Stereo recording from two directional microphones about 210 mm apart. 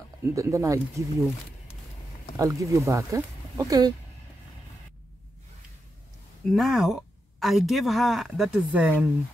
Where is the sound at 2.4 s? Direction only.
15° right (ahead or behind).